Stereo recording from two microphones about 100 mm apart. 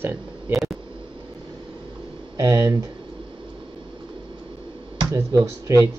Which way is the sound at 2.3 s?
30° right (ahead or behind).